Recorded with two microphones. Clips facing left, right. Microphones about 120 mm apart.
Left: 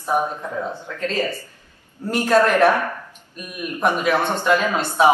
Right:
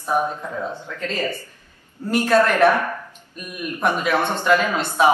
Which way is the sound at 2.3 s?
15° left (ahead or behind).